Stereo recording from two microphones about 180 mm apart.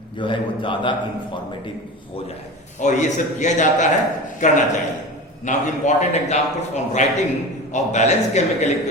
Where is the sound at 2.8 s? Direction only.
40° left (ahead or behind).